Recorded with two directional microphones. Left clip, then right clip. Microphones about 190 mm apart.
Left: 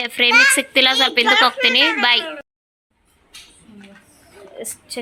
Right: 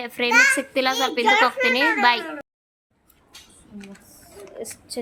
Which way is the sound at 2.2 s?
55° right (ahead or behind).